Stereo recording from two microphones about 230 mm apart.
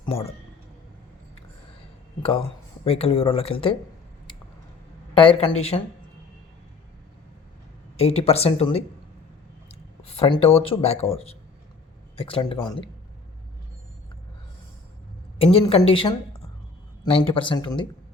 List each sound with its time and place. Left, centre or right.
0.0 s speech: left
2.8 s speech: left
5.1 s speech: left
7.9 s speech: left
10.0 s speech: left
15.5 s speech: left